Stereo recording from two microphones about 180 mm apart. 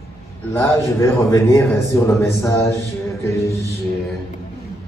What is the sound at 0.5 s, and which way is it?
A man's voice, 15° left (ahead or behind).